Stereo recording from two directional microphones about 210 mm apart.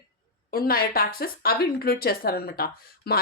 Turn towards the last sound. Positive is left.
turn(degrees=45)  # may be behind; listen again after turning